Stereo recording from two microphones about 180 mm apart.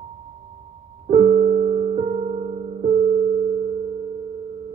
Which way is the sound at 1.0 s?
40° right (ahead or behind).